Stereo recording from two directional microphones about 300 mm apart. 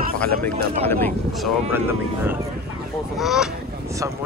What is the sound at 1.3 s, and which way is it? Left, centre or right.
Speech, centre.